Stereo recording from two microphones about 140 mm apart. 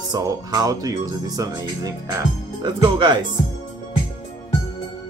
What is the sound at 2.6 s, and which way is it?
Speech, 30° right (ahead or behind).